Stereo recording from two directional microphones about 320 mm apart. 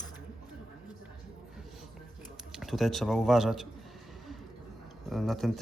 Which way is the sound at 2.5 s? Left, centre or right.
Centre.